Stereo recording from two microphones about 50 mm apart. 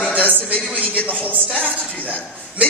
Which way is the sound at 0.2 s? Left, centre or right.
Left.